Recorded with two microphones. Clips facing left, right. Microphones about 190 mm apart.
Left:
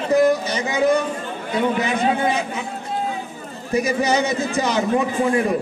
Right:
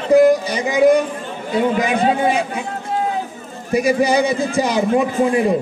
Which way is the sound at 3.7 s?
10° right (ahead or behind).